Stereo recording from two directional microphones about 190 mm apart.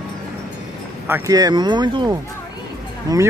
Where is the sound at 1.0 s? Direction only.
15° right (ahead or behind).